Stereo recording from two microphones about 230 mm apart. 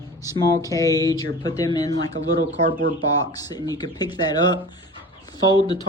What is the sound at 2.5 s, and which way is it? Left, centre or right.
Speech, right.